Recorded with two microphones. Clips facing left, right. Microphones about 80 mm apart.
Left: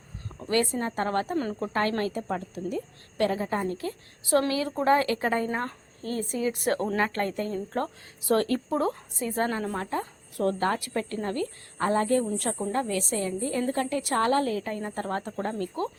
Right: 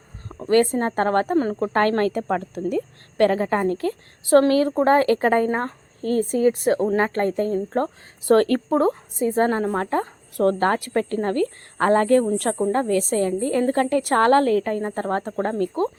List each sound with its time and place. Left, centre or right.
0.3 s a woman's voice: right
1.4 s speech: right
1.6 s a woman's voice: right
6.7 s speech: centre
6.9 s speech: right
8.3 s speech: right
8.7 s speech: right
9.1 s speech: right
9.8 s a woman's voice: right
12.5 s a woman's voice: right
14.8 s speech: right